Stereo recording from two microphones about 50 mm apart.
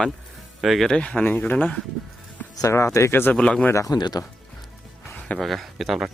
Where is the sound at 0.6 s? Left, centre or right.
Centre.